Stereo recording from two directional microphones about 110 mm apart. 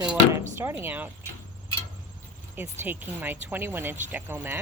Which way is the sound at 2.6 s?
20° right (ahead or behind).